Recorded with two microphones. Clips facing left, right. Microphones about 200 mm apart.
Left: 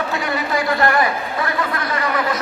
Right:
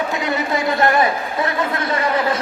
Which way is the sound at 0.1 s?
20° right (ahead or behind).